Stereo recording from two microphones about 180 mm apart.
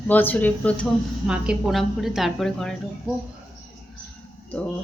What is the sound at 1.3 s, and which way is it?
A woman's voice, 5° right (ahead or behind).